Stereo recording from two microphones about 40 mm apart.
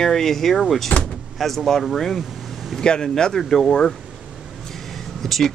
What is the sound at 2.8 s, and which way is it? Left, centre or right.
Speech, centre.